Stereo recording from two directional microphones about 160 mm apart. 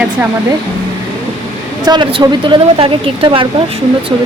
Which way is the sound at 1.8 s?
30° right (ahead or behind).